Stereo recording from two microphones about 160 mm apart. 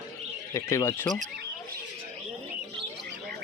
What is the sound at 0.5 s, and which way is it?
Speech, 20° left (ahead or behind).